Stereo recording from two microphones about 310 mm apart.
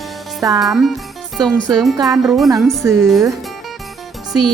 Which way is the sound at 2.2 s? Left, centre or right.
Centre.